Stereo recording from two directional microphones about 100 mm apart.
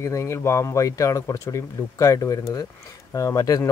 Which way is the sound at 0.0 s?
30° left (ahead or behind).